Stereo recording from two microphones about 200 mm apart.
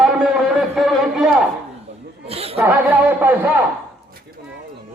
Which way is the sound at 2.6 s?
10° right (ahead or behind).